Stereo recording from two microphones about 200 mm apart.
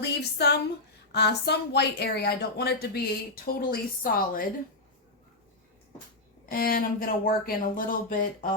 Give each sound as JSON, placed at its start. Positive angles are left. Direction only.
{"t": 0.2, "sound": "a woman's voice", "side_deg": 55}
{"t": 6.4, "sound": "a woman's voice", "side_deg": 45}